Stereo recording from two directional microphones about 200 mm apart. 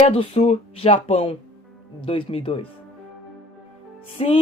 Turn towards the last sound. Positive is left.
turn(degrees=25)  # may be behind; listen again after turning